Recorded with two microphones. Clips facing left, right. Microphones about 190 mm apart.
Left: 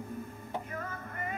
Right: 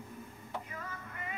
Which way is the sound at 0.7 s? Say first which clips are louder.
Left 5 dB; 50° left (ahead or behind).